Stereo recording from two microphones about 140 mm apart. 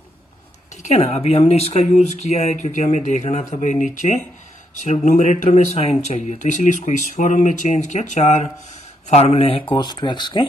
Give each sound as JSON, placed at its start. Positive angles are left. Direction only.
{"t": 0.8, "sound": "speech", "side_deg": 45}
{"t": 9.1, "sound": "speech", "side_deg": 45}